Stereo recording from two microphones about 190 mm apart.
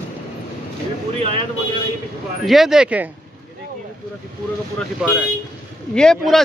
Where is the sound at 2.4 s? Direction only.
Centre (ahead or behind).